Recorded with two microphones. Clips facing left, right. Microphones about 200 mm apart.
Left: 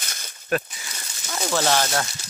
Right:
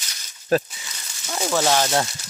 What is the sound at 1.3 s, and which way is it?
Speech, 10° right (ahead or behind).